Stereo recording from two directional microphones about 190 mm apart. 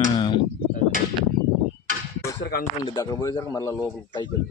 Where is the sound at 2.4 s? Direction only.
55° left (ahead or behind).